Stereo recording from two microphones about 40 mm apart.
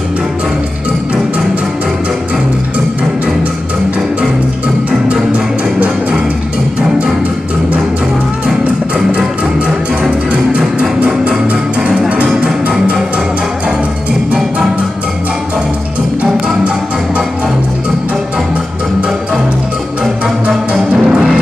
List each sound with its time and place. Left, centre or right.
11.2 s music: right
21.0 s music: right